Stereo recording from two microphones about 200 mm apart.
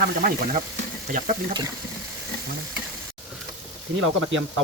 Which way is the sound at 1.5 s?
20° right (ahead or behind).